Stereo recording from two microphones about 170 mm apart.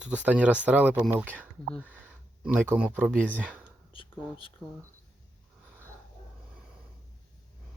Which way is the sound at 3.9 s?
30° left (ahead or behind).